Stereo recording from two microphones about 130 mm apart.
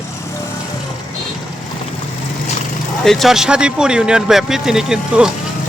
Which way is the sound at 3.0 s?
Centre (ahead or behind).